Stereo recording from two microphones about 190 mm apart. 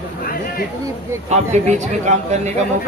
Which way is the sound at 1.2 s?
35° right (ahead or behind).